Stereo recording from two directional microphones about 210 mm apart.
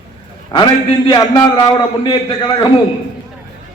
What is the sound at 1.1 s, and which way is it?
A man's voice, 20° left (ahead or behind).